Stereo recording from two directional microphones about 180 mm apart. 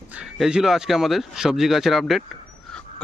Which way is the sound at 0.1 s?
5° right (ahead or behind).